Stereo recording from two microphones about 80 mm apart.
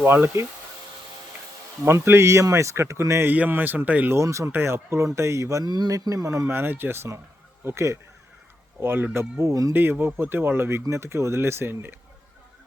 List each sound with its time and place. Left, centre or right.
0.0 s speech: right
1.8 s speech: right
3.2 s speech: right
4.1 s speech: right
5.6 s speech: right
5.9 s speech: right
9.7 s speech: right